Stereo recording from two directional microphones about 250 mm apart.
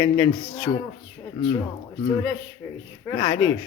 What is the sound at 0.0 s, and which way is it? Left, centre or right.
Speech, centre.